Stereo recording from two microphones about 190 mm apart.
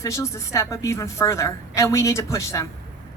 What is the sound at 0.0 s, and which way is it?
A woman's voice, 15° left (ahead or behind).